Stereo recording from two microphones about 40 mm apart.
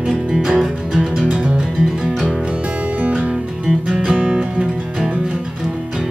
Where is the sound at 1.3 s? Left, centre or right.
Right.